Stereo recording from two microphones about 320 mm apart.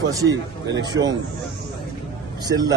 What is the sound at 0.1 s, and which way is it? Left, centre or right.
A man's voice, centre.